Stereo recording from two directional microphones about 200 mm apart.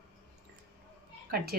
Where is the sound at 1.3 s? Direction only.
50° right (ahead or behind).